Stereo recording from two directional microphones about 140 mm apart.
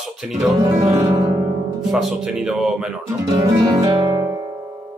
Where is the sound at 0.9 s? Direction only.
25° right (ahead or behind).